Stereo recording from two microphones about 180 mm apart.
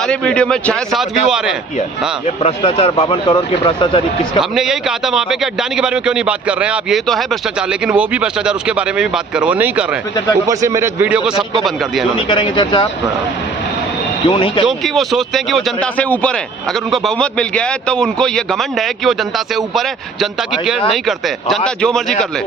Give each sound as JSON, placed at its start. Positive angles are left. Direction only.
{"t": 0.1, "sound": "a man's voice", "side_deg": 5}
{"t": 2.2, "sound": "speech", "side_deg": 35}
{"t": 4.5, "sound": "a man's voice", "side_deg": -5}
{"t": 12.1, "sound": "speech", "side_deg": 25}
{"t": 14.3, "sound": "speech", "side_deg": 30}
{"t": 14.7, "sound": "a man's voice", "side_deg": 0}
{"t": 20.9, "sound": "a man's voice", "side_deg": 0}